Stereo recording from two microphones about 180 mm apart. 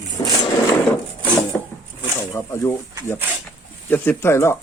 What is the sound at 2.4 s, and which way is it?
Speech, 15° left (ahead or behind).